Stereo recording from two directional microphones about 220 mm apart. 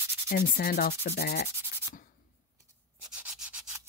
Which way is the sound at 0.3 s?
45° left (ahead or behind).